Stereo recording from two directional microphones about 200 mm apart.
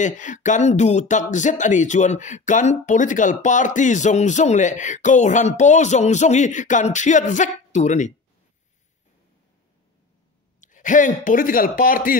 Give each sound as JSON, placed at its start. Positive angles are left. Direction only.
{"t": 0.0, "sound": "speech", "side_deg": 40}
{"t": 10.6, "sound": "speech", "side_deg": 40}